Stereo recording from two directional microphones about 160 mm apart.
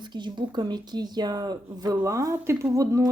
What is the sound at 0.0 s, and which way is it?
A woman's voice, 30° right (ahead or behind).